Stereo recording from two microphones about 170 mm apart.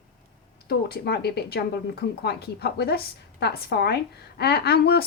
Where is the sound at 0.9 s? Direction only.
70° left (ahead or behind).